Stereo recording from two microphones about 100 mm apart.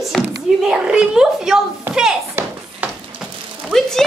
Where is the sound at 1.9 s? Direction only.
5° right (ahead or behind).